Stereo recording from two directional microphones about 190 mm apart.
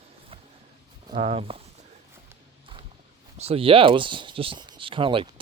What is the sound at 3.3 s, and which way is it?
Speech, 30° right (ahead or behind).